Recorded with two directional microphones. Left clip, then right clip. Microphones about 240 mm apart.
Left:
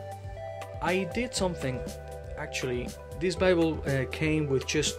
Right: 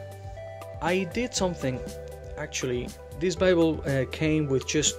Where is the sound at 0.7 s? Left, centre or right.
Centre.